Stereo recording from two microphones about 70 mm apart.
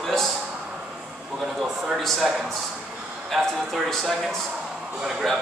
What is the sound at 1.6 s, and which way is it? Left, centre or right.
Speech, centre.